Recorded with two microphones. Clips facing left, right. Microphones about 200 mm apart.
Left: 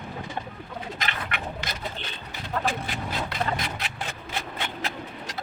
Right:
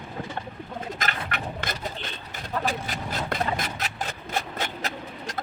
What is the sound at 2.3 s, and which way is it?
Vehicle, 40° right (ahead or behind).